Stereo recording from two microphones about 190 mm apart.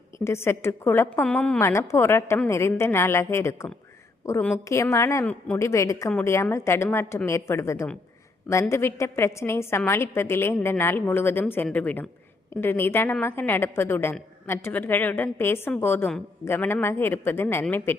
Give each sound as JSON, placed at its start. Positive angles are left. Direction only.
{"t": 0.3, "sound": "a woman's voice", "side_deg": 15}
{"t": 4.7, "sound": "a woman's voice", "side_deg": 15}